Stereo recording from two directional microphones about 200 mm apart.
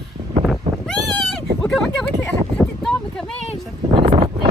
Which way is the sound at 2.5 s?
5° left (ahead or behind).